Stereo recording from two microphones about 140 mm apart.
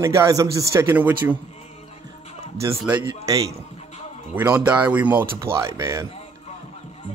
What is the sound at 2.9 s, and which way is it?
Speech, 25° right (ahead or behind).